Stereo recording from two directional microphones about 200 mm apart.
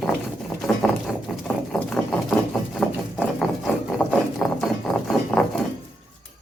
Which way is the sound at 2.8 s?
Centre (ahead or behind).